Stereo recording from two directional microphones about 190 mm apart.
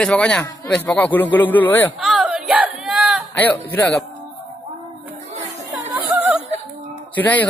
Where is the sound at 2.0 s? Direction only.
Centre (ahead or behind).